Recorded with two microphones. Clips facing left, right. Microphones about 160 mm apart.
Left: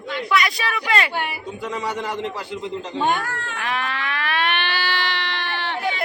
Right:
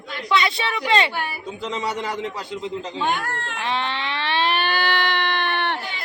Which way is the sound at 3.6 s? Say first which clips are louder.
Right 1 dB; 30° right (ahead or behind).